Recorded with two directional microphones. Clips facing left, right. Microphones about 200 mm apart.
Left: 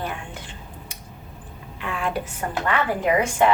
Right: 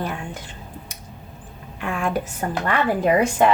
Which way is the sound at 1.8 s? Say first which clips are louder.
Right 3 dB; 45° right (ahead or behind).